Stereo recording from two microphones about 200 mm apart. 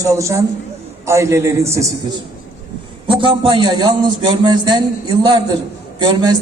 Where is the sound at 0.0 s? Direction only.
15° right (ahead or behind).